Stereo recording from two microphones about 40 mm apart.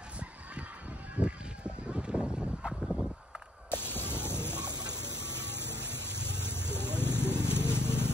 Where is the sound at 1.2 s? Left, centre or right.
Right.